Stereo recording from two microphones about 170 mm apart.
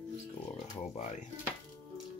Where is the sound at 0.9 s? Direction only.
45° left (ahead or behind).